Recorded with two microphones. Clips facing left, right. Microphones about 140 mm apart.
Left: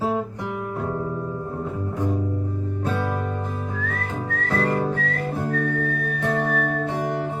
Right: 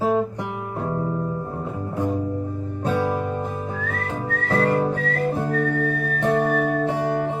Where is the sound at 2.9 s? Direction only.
15° right (ahead or behind).